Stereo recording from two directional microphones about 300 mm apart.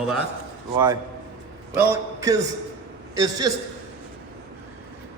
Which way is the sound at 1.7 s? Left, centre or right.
Centre.